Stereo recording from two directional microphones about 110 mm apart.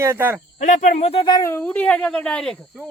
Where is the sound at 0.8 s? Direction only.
80° left; by 1.3 s 60° left (ahead or behind).